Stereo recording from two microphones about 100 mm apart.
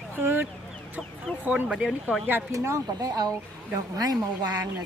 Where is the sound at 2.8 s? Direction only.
40° right (ahead or behind).